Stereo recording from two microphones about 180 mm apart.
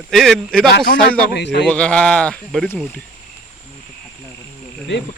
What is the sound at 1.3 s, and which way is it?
Speech, 70° left (ahead or behind).